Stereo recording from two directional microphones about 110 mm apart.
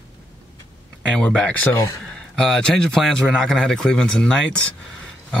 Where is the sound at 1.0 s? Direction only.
5° left (ahead or behind); by 2.0 s 25° left (ahead or behind).